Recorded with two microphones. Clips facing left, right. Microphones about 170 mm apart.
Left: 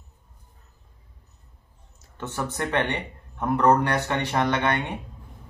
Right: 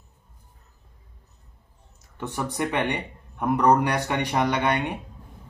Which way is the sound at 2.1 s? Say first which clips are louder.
Right 1 dB; 15° right (ahead or behind).